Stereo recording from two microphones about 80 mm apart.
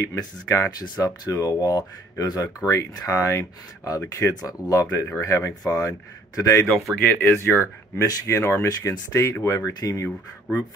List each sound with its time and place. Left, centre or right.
0.0 s speech: left
6.7 s speech: centre
7.0 s speech: left
7.5 s speech: left
9.8 s speech: left